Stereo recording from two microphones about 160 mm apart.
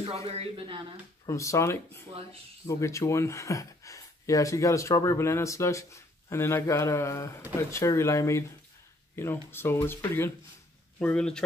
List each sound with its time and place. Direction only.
0.0 s a man's voice: 40° right (ahead or behind)
1.2 s speech: 20° left (ahead or behind)